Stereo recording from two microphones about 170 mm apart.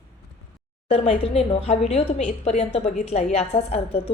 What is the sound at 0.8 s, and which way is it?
A woman's voice, 35° left (ahead or behind).